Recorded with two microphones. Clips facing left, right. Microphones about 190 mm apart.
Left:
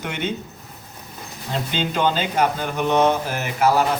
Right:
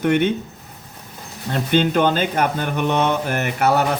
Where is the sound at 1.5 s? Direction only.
55° right (ahead or behind).